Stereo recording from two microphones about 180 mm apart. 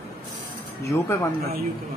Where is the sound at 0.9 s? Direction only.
15° left (ahead or behind).